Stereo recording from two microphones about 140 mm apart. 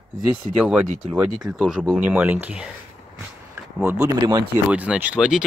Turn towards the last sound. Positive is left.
turn(degrees=-5)  # may be behind; listen again after turning